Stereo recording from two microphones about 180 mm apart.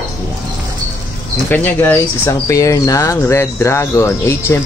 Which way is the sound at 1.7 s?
10° left (ahead or behind).